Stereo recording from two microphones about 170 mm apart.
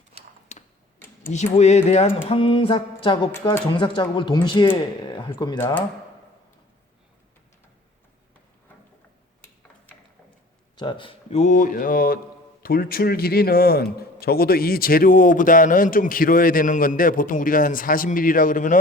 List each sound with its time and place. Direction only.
0.5 s tick-tock: 45° left (ahead or behind)
1.5 s mantra: 40° left (ahead or behind)
3.7 s speech: 30° left (ahead or behind)
9.9 s a sound: 10° left (ahead or behind)
10.8 s speech: 30° left (ahead or behind); by 18.8 s 50° left (ahead or behind)